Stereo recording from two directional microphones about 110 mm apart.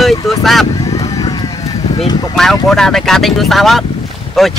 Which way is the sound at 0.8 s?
30° left (ahead or behind).